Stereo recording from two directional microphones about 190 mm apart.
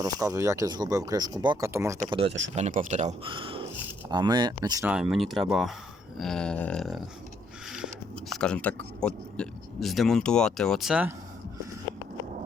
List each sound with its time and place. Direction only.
0.0 s speech: 15° right (ahead or behind)
2.2 s speech: 75° right (ahead or behind)
2.6 s speech: 40° right (ahead or behind)
3.2 s speech: 25° right (ahead or behind)
4.9 s speech: centre (ahead or behind)